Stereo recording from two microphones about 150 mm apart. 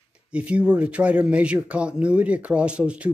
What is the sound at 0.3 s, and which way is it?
Speech, 10° right (ahead or behind).